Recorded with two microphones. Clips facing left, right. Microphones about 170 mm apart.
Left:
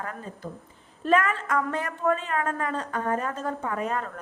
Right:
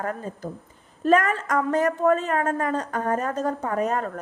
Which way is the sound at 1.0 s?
40° right (ahead or behind).